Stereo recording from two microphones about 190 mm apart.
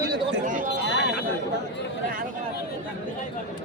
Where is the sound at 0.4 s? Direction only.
45° right (ahead or behind).